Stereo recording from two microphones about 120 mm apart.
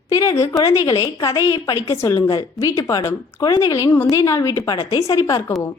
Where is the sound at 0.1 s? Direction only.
25° left (ahead or behind).